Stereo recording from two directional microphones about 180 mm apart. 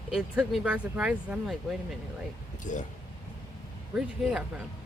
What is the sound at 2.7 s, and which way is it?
Speech, 45° left (ahead or behind).